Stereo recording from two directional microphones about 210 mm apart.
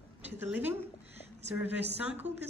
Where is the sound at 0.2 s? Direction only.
10° right (ahead or behind).